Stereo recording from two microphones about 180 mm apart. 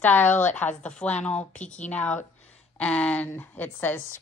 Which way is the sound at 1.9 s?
10° left (ahead or behind).